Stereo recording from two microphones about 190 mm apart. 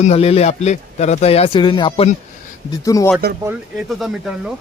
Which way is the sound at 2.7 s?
15° left (ahead or behind).